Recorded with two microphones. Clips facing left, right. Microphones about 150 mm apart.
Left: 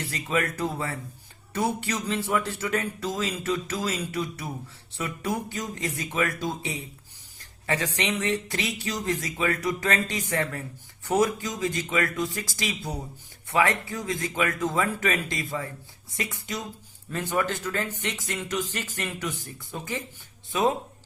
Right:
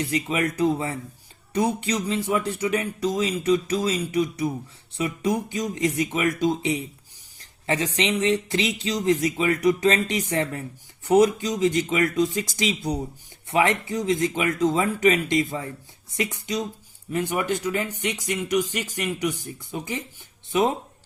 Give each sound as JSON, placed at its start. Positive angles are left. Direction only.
{"t": 0.1, "sound": "speech", "side_deg": -20}